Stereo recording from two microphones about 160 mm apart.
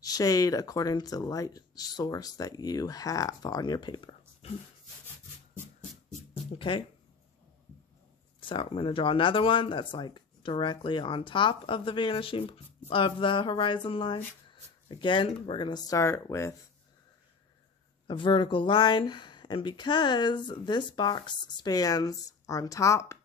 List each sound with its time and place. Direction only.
0.0 s speech: 20° left (ahead or behind)
8.4 s speech: 30° left (ahead or behind)
18.0 s speech: 30° left (ahead or behind)